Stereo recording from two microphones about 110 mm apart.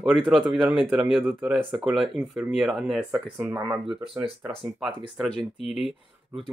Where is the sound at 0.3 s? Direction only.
5° right (ahead or behind).